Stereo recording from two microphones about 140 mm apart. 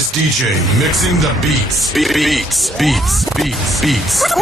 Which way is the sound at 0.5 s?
Centre (ahead or behind).